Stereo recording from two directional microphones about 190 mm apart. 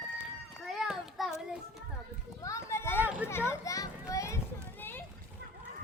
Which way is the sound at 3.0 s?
5° right (ahead or behind).